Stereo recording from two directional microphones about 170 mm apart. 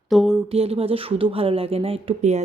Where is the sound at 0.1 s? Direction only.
Centre (ahead or behind).